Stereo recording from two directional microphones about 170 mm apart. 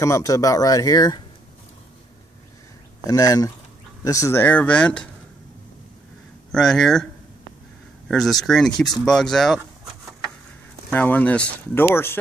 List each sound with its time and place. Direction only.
0.0 s speech: 20° left (ahead or behind)
3.1 s speech: 20° left (ahead or behind)
6.5 s speech: centre (ahead or behind)
8.1 s speech: centre (ahead or behind)
10.9 s speech: 10° left (ahead or behind)